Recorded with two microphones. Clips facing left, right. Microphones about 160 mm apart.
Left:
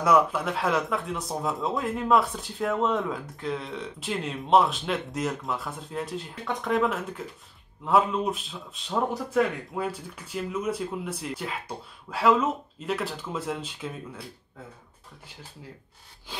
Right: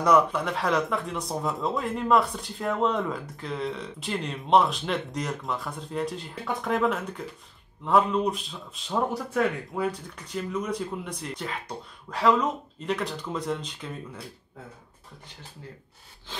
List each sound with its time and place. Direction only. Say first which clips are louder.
0.0 s speech: even; 5° left (ahead or behind)